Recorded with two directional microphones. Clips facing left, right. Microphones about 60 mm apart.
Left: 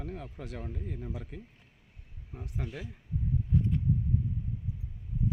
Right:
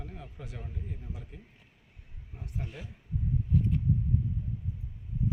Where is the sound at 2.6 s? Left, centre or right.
Left.